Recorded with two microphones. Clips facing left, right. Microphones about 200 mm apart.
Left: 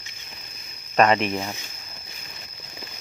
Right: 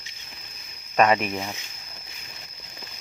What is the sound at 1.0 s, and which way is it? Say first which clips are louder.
Speech: left 1 dB; 5° right (ahead or behind).